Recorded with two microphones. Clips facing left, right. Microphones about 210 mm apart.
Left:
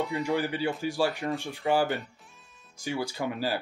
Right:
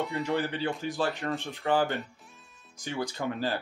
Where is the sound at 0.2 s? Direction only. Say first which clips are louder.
Even; 10° left (ahead or behind).